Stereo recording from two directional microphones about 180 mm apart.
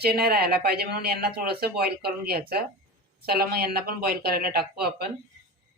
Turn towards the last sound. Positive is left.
turn(degrees=-60)  # may be behind; listen again after turning